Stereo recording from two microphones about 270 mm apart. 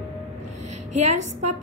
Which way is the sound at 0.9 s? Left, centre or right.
Right.